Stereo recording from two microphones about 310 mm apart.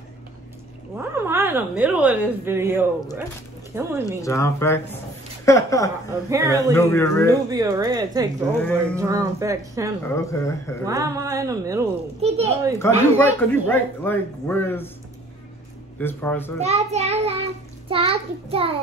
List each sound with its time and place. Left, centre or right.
0.9 s a woman's voice: centre
4.2 s speech: centre
6.3 s a woman's voice: centre
6.7 s speech: centre
7.5 s a woman's voice: centre
10.0 s speech: centre
10.9 s a woman's voice: centre
12.7 s speech: centre
16.0 s speech: centre
16.6 s a child's voice: right